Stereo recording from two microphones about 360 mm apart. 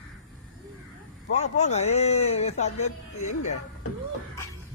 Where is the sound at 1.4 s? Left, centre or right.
Centre.